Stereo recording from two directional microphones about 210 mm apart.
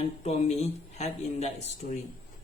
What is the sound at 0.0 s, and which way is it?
Speech, 30° left (ahead or behind).